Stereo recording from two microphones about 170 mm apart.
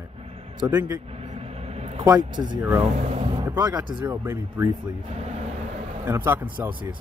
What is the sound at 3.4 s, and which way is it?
Speech, 20° right (ahead or behind).